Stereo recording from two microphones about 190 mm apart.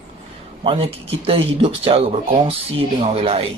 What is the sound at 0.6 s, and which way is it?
Speech, 30° right (ahead or behind).